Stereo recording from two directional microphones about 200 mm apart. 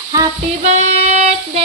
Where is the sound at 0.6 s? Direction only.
35° right (ahead or behind).